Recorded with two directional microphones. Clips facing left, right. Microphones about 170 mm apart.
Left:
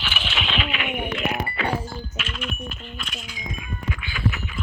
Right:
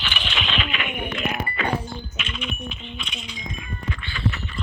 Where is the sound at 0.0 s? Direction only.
5° left (ahead or behind).